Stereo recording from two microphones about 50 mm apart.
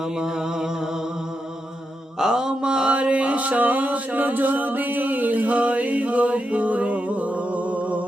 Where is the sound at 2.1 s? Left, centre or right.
Centre.